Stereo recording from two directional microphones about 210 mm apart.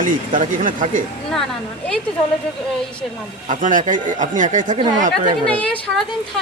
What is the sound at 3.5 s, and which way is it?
Speech, 40° right (ahead or behind).